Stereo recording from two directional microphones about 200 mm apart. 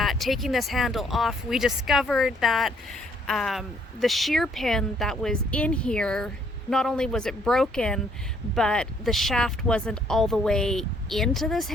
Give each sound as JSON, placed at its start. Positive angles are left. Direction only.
{"t": 0.0, "sound": "speech", "side_deg": 0}